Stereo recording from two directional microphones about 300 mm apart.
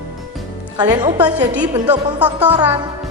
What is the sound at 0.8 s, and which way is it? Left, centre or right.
Music, centre.